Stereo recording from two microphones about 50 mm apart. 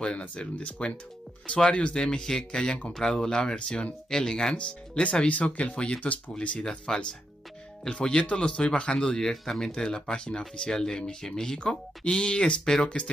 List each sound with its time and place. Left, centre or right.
0.6 s speech: left